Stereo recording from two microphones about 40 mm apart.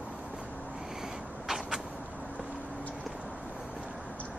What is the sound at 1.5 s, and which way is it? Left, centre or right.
Vehicle, centre.